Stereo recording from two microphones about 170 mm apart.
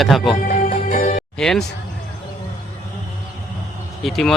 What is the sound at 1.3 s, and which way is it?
Speech, 5° left (ahead or behind).